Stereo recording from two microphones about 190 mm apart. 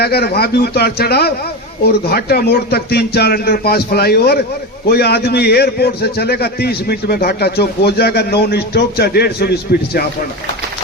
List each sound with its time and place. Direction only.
0.0 s a man's voice: 55° left (ahead or behind)